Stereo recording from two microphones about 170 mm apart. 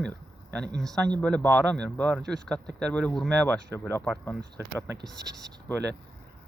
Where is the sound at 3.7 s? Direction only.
15° left (ahead or behind).